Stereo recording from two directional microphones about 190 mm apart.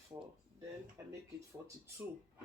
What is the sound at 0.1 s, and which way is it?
Speech, 20° right (ahead or behind).